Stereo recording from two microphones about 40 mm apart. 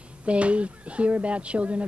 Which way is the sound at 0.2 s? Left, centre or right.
Right.